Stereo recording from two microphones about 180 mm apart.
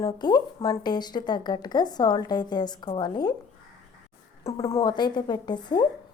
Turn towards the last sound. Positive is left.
turn(degrees=25)  # may be behind; listen again after turning